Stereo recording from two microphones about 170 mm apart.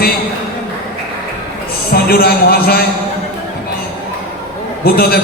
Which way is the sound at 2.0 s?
60° left (ahead or behind).